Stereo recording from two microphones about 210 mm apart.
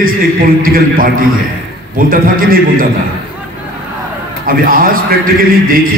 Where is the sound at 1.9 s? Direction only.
45° right (ahead or behind).